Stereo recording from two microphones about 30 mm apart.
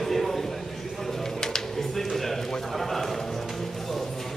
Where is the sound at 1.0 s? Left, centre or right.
Centre.